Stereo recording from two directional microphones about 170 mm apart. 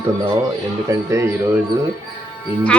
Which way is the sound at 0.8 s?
20° right (ahead or behind).